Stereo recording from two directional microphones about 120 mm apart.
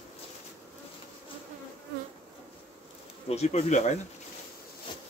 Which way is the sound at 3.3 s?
65° left (ahead or behind).